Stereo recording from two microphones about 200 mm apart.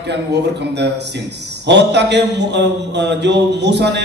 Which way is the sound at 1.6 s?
60° right (ahead or behind).